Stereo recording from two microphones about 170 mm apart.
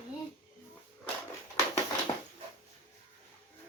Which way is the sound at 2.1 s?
20° left (ahead or behind).